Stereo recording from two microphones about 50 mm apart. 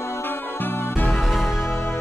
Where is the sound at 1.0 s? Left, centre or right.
Centre.